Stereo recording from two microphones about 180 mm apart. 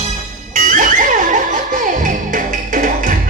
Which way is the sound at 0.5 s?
45° right (ahead or behind).